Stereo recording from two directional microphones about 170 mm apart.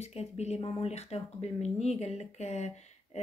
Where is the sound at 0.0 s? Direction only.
40° left (ahead or behind).